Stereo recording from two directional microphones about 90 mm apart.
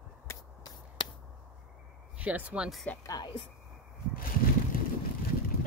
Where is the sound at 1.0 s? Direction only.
50° left (ahead or behind).